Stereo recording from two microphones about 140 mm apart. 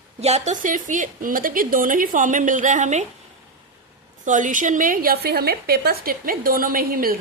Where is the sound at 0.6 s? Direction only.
70° right (ahead or behind).